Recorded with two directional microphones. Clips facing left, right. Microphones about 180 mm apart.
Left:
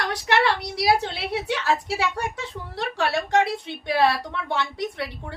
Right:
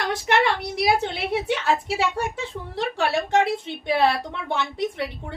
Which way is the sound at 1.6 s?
25° right (ahead or behind).